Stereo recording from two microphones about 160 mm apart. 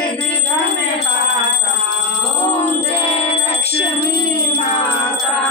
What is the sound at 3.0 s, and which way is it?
Music, 35° left (ahead or behind).